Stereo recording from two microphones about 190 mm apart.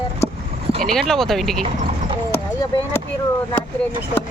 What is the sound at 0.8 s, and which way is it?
Speech, centre (ahead or behind).